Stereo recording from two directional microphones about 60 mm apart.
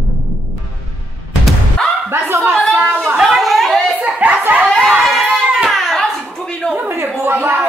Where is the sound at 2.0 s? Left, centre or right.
Right.